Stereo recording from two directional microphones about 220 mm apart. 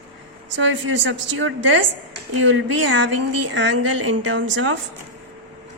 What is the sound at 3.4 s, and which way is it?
Speech, 55° right (ahead or behind).